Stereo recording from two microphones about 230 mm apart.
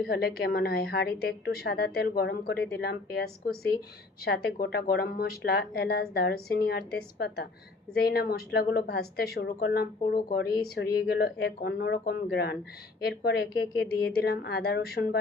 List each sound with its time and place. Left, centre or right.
0.0 s a woman's voice: left